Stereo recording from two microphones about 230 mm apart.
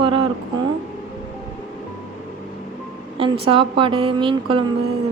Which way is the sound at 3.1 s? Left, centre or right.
Right.